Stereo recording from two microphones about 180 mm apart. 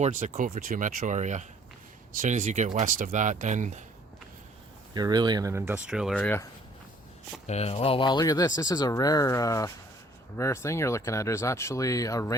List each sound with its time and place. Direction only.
0.0 s speech: 40° right (ahead or behind)
4.9 s speech: 20° right (ahead or behind); by 6.5 s 10° left (ahead or behind)
7.4 s speech: 35° left (ahead or behind); by 12.4 s 20° left (ahead or behind)